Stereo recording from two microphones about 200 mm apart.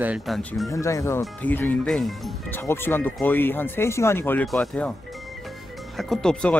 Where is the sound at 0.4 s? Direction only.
5° left (ahead or behind).